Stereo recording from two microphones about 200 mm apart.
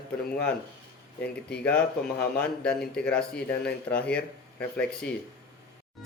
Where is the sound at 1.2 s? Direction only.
55° left (ahead or behind).